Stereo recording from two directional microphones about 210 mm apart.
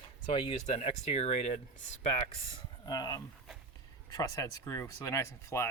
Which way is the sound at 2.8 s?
20° left (ahead or behind).